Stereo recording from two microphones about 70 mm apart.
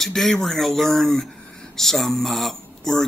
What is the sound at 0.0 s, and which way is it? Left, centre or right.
Speech, centre.